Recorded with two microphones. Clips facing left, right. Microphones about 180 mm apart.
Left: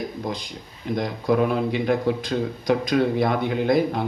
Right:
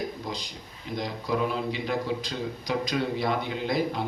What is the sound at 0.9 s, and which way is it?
A man's voice, 55° left (ahead or behind).